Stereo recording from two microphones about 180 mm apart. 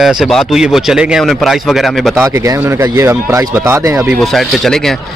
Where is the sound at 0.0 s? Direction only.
Centre (ahead or behind).